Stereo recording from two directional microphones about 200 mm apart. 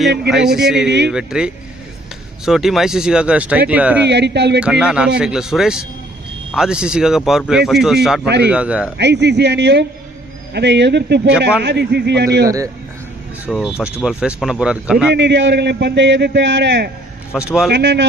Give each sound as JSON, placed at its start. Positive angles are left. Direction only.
{"t": 0.3, "sound": "speech", "side_deg": 0}
{"t": 0.9, "sound": "a man's voice", "side_deg": -60}
{"t": 1.1, "sound": "speech", "side_deg": -5}
{"t": 4.1, "sound": "a man's voice", "side_deg": -60}
{"t": 4.6, "sound": "speech", "side_deg": -5}
{"t": 9.0, "sound": "a man's voice", "side_deg": -60}
{"t": 12.5, "sound": "speech", "side_deg": -15}
{"t": 13.5, "sound": "speech", "side_deg": -5}
{"t": 15.1, "sound": "a man's voice", "side_deg": -60}
{"t": 17.3, "sound": "speech", "side_deg": 0}
{"t": 17.7, "sound": "a man's voice", "side_deg": -60}